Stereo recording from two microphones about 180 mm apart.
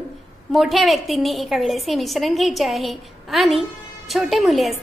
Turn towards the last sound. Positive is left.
turn(degrees=0)  # may be behind; listen again after turning